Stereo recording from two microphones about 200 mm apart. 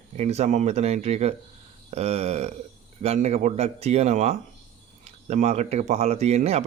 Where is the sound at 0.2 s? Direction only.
35° right (ahead or behind).